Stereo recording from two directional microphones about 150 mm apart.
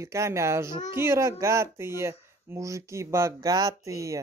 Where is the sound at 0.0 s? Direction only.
20° right (ahead or behind).